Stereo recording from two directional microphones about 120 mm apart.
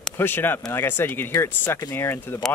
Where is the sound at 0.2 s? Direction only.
15° left (ahead or behind).